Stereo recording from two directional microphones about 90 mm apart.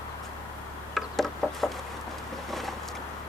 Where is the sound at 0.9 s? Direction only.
5° left (ahead or behind).